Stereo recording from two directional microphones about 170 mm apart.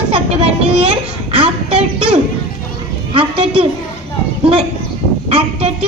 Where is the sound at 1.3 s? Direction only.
35° right (ahead or behind).